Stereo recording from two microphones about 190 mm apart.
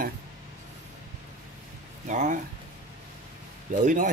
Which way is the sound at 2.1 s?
40° right (ahead or behind).